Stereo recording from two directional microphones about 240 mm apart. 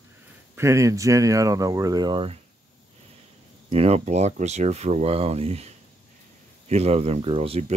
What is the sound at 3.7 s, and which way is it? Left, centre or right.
Speech, right.